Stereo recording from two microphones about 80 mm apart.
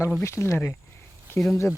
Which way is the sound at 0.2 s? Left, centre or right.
Left.